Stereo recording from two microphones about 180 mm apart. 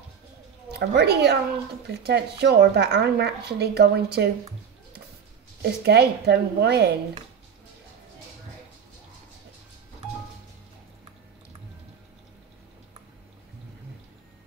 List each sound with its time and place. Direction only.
0.7 s a woman's voice: 65° right (ahead or behind)
5.6 s speech: 65° right (ahead or behind)